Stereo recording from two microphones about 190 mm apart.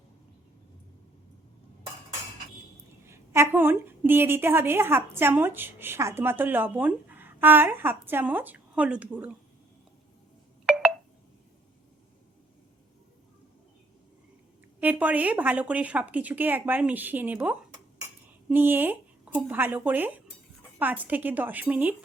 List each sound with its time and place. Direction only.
3.1 s a woman's voice: 15° right (ahead or behind)
14.8 s a woman's voice: 10° right (ahead or behind)